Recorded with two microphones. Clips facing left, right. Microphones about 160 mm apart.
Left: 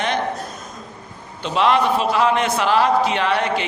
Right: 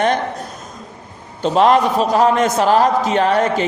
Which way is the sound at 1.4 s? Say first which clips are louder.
Right 4 dB; 45° right (ahead or behind).